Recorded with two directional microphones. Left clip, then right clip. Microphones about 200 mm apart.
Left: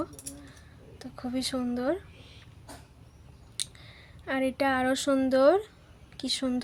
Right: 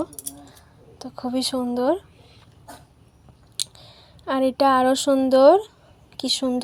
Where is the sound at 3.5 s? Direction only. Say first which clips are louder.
Right 7 dB; 15° right (ahead or behind).